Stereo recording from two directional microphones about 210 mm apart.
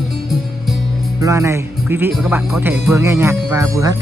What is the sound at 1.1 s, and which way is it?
Speech, 15° right (ahead or behind).